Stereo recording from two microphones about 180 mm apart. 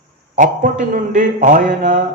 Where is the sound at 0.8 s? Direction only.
45° right (ahead or behind).